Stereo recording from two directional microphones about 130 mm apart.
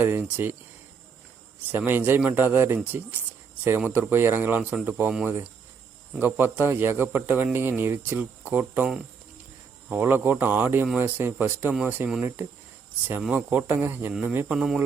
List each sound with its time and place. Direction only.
0.0 s a man's voice: 15° right (ahead or behind)
1.7 s a man's voice: 15° right (ahead or behind)